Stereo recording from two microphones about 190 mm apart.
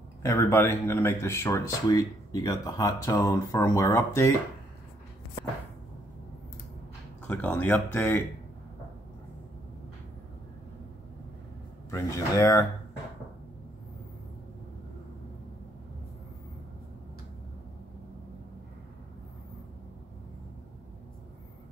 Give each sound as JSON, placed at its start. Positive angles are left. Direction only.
{"t": 0.2, "sound": "speech", "side_deg": 15}
{"t": 7.2, "sound": "speech", "side_deg": 10}
{"t": 11.9, "sound": "speech", "side_deg": 15}